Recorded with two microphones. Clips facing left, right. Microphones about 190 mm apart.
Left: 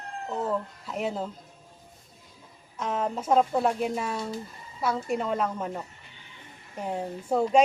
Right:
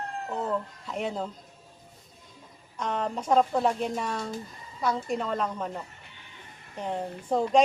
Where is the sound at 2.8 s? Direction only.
5° left (ahead or behind).